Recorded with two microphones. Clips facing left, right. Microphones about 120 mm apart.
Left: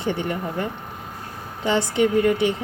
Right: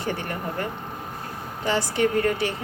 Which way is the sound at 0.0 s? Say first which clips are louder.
Left 4 dB; 20° left (ahead or behind).